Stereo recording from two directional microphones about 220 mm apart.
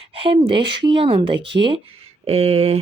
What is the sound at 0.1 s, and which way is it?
Speech, 25° right (ahead or behind).